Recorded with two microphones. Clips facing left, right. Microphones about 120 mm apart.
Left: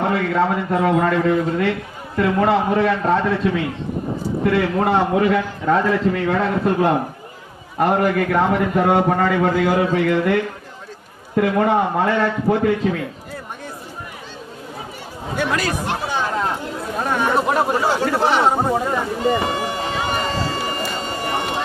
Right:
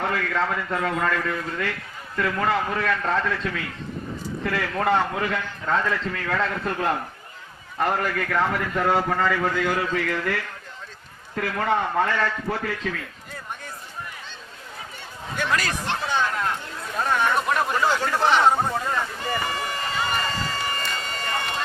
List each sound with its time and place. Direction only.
0.0 s a man's voice: 25° left (ahead or behind)
15.4 s speech: 15° left (ahead or behind)
16.3 s chatter: 25° left (ahead or behind)
17.0 s speech: 20° left (ahead or behind)
18.7 s a sound: 15° left (ahead or behind)